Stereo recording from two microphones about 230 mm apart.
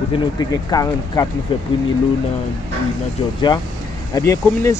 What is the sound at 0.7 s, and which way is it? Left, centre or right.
Speech, centre.